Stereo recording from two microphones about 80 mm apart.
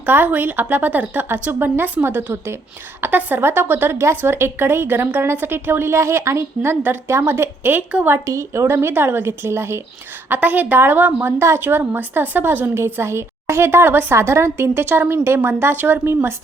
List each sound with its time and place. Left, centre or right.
0.0 s a woman's voice: right
8.2 s a woman's voice: right